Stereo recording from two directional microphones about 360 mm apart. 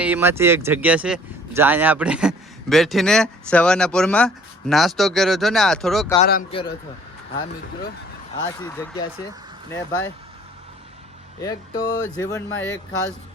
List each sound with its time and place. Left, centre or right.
0.0 s speech: centre
6.1 s speech: left
8.5 s speech: centre
11.3 s speech: centre